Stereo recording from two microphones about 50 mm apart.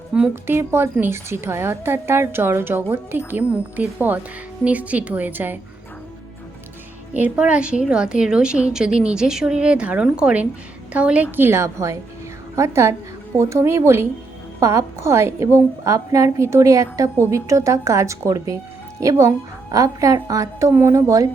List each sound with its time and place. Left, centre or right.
0.1 s a woman's voice: centre
0.4 s a woman's voice: right
3.5 s a woman's voice: right
7.3 s a woman's voice: right
11.3 s a woman's voice: right
11.5 s a woman's voice: right
14.6 s a woman's voice: right